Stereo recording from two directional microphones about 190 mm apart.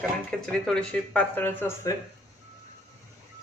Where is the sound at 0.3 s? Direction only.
5° left (ahead or behind).